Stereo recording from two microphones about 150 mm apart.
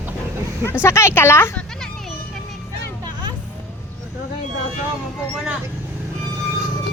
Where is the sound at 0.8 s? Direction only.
20° left (ahead or behind).